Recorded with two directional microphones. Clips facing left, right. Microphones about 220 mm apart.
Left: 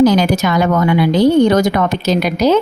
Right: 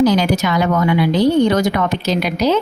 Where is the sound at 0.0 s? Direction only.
45° left (ahead or behind).